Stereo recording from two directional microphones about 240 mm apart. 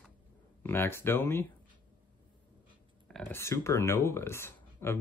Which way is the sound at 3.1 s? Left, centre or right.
Centre.